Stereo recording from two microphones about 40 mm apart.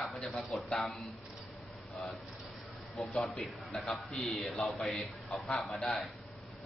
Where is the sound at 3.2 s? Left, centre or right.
Centre.